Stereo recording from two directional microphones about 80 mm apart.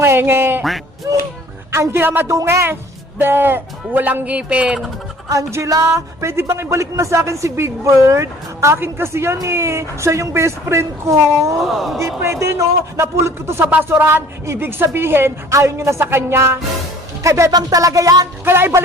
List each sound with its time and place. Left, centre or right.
0.0 s a man's voice: right
1.1 s a man's voice: right
2.2 s a man's voice: right; by 4.8 s centre
5.3 s music: right
5.7 s speech: right
11.6 s speech: centre
11.9 s speech: right
17.5 s music: right
18.4 s speech: right